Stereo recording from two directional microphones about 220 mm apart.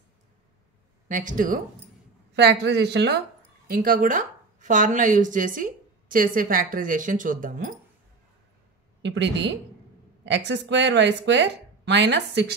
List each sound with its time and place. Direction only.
1.0 s speech: 35° right (ahead or behind)
2.3 s a woman's voice: 50° right (ahead or behind)
9.0 s speech: 50° right (ahead or behind)